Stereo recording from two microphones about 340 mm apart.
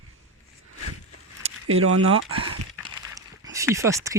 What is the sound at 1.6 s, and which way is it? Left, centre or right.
Speech, right.